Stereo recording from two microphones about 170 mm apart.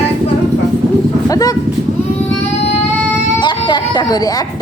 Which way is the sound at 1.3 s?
20° left (ahead or behind).